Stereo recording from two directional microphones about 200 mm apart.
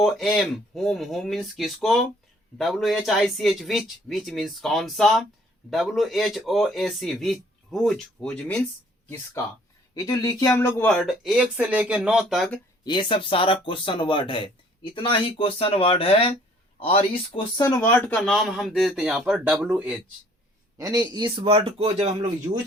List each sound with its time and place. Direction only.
0.0 s a man's voice: centre (ahead or behind)
12.8 s speech: 25° left (ahead or behind)
17.6 s speech: 15° left (ahead or behind)
18.1 s a man's voice: centre (ahead or behind)
20.7 s speech: 15° right (ahead or behind)